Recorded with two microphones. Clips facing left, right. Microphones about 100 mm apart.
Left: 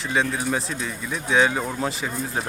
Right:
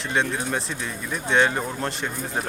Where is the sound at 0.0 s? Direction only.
Centre (ahead or behind).